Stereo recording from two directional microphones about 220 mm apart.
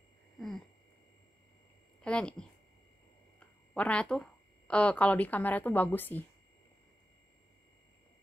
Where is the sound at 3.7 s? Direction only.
5° left (ahead or behind).